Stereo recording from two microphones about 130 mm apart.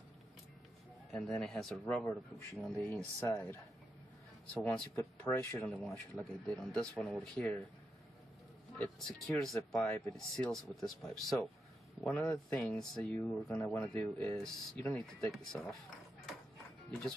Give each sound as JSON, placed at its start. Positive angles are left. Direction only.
{"t": 1.1, "sound": "speech", "side_deg": 5}
{"t": 3.2, "sound": "speech", "side_deg": 20}
{"t": 4.6, "sound": "speech", "side_deg": 10}
{"t": 5.7, "sound": "speech", "side_deg": 5}
{"t": 8.7, "sound": "speech", "side_deg": 5}